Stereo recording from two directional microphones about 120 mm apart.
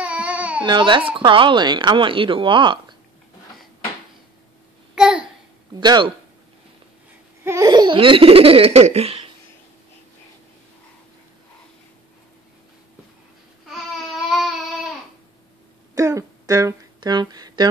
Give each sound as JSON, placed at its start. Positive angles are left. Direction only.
{"t": 0.0, "sound": "baby cry", "side_deg": -10}
{"t": 0.7, "sound": "speech", "side_deg": -40}
{"t": 4.9, "sound": "a sound", "side_deg": -5}
{"t": 5.8, "sound": "speech", "side_deg": -40}
{"t": 7.4, "sound": "laughter", "side_deg": -25}
{"t": 7.7, "sound": "speech", "side_deg": -40}
{"t": 13.7, "sound": "babbling", "side_deg": 0}
{"t": 15.9, "sound": "a sound", "side_deg": -25}